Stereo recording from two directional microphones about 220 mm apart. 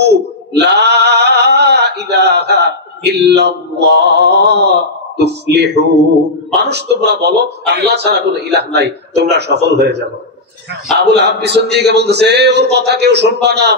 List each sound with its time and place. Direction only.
0.0 s male singing: 50° right (ahead or behind)
6.7 s a man's voice: 50° right (ahead or behind)
11.0 s a man's voice: 50° right (ahead or behind)